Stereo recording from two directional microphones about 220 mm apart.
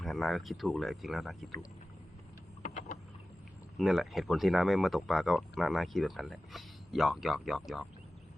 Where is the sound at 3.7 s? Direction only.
Centre (ahead or behind).